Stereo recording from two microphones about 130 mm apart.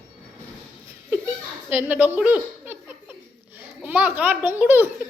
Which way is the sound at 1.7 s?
10° right (ahead or behind).